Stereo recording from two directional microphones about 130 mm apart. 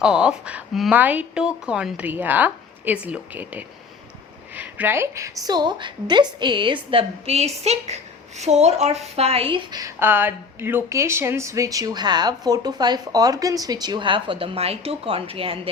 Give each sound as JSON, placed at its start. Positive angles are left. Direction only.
{"t": 0.0, "sound": "a woman's voice", "side_deg": -5}
{"t": 6.9, "sound": "a woman's voice", "side_deg": -55}
{"t": 10.0, "sound": "speech", "side_deg": -15}